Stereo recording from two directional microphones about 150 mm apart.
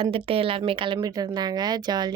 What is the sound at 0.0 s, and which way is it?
Speech, 40° right (ahead or behind).